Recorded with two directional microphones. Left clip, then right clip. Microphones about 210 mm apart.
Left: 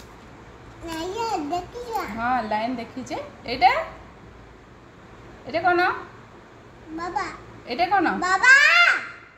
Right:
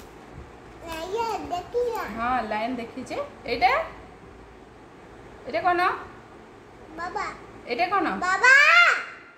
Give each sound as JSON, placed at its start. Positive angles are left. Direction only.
{"t": 0.8, "sound": "children playing", "side_deg": -20}
{"t": 2.2, "sound": "a woman's voice", "side_deg": 0}
{"t": 5.5, "sound": "a woman's voice", "side_deg": 0}
{"t": 7.6, "sound": "a woman's voice", "side_deg": 0}
{"t": 8.2, "sound": "a child's voice", "side_deg": -20}